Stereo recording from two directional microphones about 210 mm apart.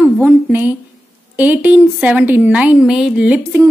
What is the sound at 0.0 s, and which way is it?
A woman's voice, 10° right (ahead or behind).